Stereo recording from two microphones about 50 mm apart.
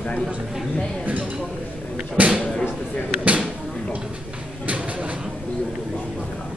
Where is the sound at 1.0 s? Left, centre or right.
Right.